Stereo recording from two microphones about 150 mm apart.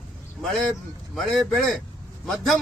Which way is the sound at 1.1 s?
Centre (ahead or behind).